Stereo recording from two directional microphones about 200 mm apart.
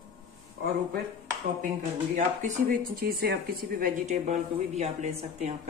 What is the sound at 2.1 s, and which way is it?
Speech, 40° right (ahead or behind).